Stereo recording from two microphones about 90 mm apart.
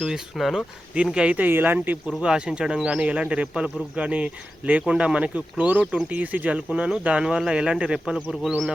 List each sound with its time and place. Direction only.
0.0 s speech: 5° right (ahead or behind)
1.1 s speech: 15° right (ahead or behind)
2.0 s speech: 5° right (ahead or behind)